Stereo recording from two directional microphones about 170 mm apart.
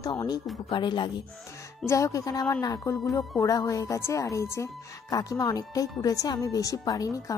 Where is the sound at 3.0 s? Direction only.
Centre (ahead or behind).